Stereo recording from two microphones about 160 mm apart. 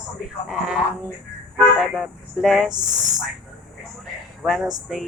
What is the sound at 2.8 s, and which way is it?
Speech, 25° right (ahead or behind).